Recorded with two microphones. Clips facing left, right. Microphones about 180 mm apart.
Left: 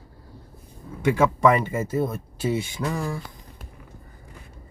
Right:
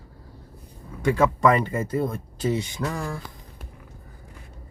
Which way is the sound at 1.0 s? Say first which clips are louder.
Left 1 dB; 5° left (ahead or behind).